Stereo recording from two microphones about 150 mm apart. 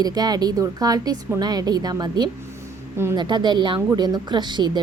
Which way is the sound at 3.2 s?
30° right (ahead or behind).